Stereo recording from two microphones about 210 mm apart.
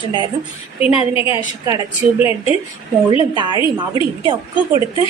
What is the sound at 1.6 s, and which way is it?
Speech, 15° right (ahead or behind).